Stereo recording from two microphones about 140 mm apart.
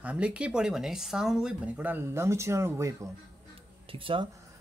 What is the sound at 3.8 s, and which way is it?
Speech, 40° right (ahead or behind).